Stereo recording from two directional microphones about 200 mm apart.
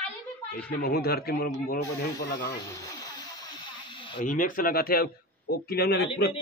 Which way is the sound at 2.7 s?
20° left (ahead or behind).